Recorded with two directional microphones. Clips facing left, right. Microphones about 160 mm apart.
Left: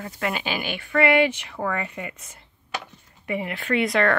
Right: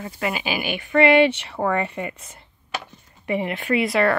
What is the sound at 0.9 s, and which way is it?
A woman's voice, 25° right (ahead or behind).